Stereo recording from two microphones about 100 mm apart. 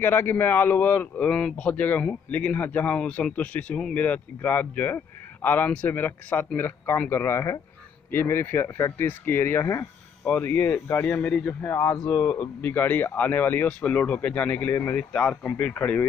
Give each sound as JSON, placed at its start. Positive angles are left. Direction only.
{"t": 0.0, "sound": "speech", "side_deg": 20}